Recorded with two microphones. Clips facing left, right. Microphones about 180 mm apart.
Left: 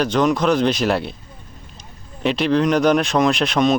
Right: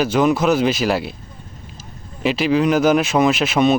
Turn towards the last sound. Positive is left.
turn(degrees=-5)  # may be behind; listen again after turning